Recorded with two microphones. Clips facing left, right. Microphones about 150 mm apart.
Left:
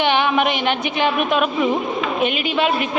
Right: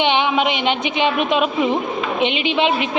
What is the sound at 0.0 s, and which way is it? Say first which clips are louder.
A woman's voice: even; 15° right (ahead or behind).